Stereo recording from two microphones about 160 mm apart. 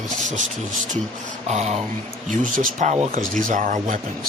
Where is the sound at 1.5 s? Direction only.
45° right (ahead or behind).